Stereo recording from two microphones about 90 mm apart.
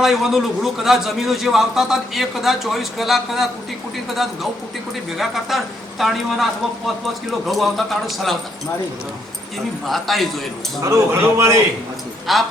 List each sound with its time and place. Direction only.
0.0 s a man's voice: 5° right (ahead or behind)
9.8 s a man's voice: centre (ahead or behind)
10.8 s speech: 35° right (ahead or behind)
12.3 s a man's voice: centre (ahead or behind)